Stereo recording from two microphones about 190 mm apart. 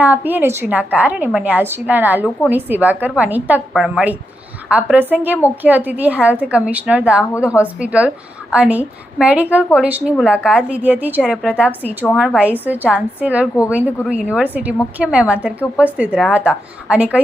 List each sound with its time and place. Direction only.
0.0 s a woman's voice: 10° right (ahead or behind)
7.3 s a woman's voice: 15° left (ahead or behind)
7.6 s a woman's voice: 5° right (ahead or behind)